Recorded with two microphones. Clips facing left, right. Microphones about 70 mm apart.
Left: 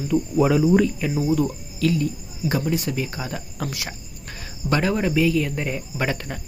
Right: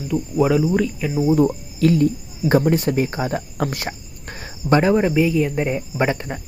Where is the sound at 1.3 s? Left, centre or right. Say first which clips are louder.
Right 5 dB; right.